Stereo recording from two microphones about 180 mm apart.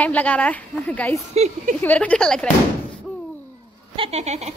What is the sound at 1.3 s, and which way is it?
Speech, 35° right (ahead or behind).